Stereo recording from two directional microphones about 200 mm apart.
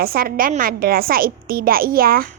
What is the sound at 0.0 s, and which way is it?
A woman's voice, 50° right (ahead or behind).